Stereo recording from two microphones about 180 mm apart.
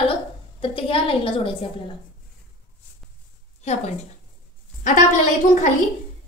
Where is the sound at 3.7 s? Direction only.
40° left (ahead or behind).